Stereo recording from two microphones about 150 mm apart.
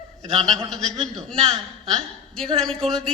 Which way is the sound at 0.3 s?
5° left (ahead or behind).